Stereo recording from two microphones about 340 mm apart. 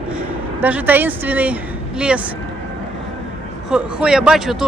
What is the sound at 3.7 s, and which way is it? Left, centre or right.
Speech, centre.